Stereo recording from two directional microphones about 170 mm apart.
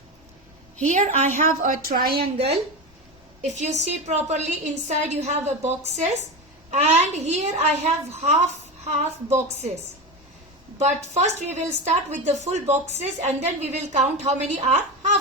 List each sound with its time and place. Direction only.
0.8 s a woman's voice: 45° right (ahead or behind); by 2.5 s 65° right (ahead or behind)
3.6 s a woman's voice: 40° right (ahead or behind)
10.8 s a woman's voice: 40° right (ahead or behind)